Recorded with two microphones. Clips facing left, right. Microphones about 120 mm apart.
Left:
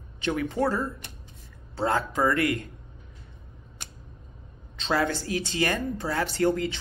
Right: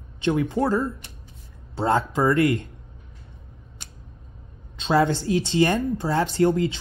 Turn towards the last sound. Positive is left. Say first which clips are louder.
# right 4 dB
turn(degrees=-25)  # may be behind; listen again after turning